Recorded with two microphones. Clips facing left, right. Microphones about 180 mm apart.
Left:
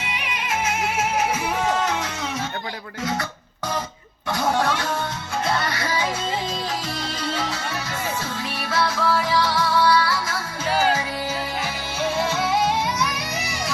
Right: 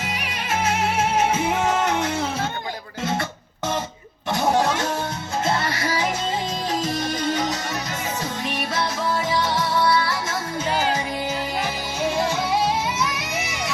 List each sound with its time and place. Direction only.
0.0 s music: 40° right (ahead or behind); by 2.0 s 25° right (ahead or behind)
3.0 s music: 25° right (ahead or behind)
4.3 s a sound: 20° right (ahead or behind)
5.5 s music: 25° right (ahead or behind)
8.5 s music: 20° right (ahead or behind)